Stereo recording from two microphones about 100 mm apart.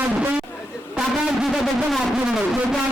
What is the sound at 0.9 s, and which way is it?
Speech, 10° right (ahead or behind).